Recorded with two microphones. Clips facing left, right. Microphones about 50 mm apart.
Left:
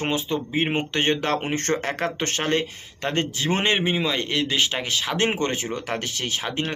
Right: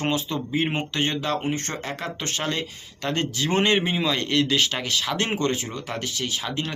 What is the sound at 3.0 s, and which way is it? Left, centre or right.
Speech, left.